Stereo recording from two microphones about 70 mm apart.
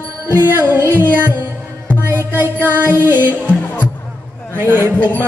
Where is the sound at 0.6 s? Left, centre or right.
Right.